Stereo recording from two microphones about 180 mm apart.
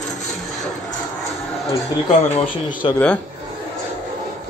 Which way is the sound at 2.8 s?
30° left (ahead or behind).